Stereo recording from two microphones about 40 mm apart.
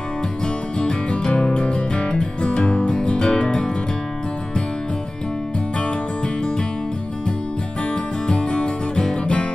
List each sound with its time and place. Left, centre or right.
0.7 s music: left
5.8 s music: left
7.9 s music: left